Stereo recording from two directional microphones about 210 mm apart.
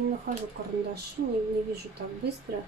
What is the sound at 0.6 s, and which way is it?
Speech, 50° right (ahead or behind).